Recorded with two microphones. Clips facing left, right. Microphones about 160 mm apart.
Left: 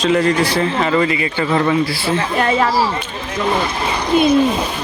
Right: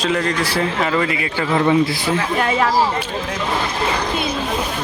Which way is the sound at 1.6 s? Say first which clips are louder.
Right 1 dB; 20° right (ahead or behind).